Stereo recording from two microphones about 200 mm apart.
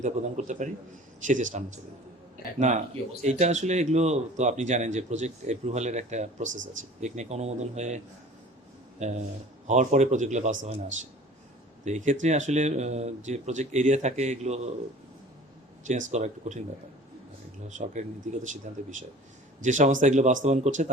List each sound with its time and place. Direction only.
0.0 s speech: 35° right (ahead or behind)
15.9 s speech: 35° right (ahead or behind)
17.7 s speech: 35° right (ahead or behind)